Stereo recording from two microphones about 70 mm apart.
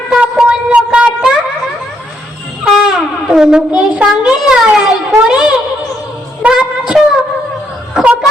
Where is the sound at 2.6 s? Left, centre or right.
Centre.